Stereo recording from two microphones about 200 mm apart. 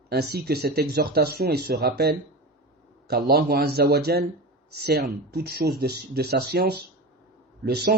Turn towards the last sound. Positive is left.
turn(degrees=-50)  # may be behind; listen again after turning